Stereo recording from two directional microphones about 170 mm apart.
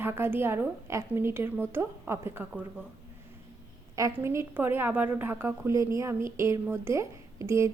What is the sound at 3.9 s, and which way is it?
A woman's voice, 15° right (ahead or behind).